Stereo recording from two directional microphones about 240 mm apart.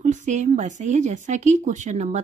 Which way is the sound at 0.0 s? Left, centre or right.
Right.